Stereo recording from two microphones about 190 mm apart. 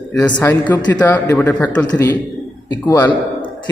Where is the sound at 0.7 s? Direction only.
15° left (ahead or behind).